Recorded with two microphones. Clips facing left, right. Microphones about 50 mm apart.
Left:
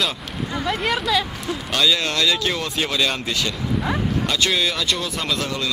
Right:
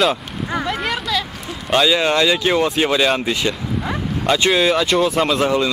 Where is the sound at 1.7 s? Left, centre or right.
Centre.